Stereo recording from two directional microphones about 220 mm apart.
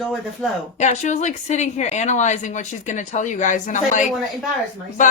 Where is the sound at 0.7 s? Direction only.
30° left (ahead or behind).